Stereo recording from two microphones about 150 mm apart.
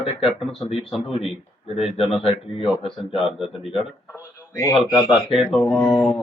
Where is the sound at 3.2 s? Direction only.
5° right (ahead or behind).